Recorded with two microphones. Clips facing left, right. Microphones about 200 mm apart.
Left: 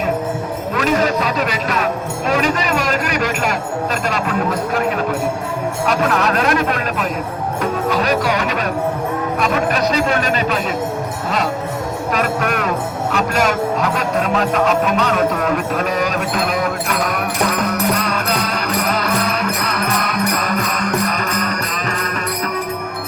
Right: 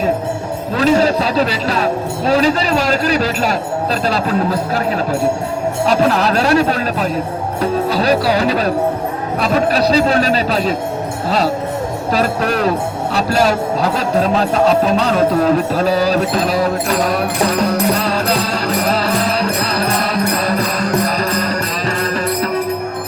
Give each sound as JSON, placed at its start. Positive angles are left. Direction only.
{"t": 0.8, "sound": "speech", "side_deg": -30}
{"t": 4.1, "sound": "music", "side_deg": -30}
{"t": 5.8, "sound": "music", "side_deg": -30}
{"t": 12.1, "sound": "music", "side_deg": -30}